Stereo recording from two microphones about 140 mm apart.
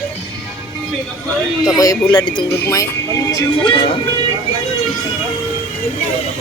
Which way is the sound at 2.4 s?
20° left (ahead or behind).